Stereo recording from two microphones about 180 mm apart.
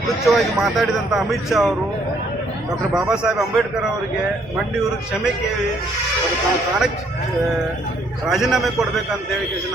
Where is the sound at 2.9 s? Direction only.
5° right (ahead or behind).